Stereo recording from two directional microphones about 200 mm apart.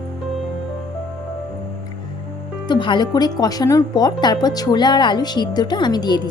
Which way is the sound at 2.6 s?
25° left (ahead or behind).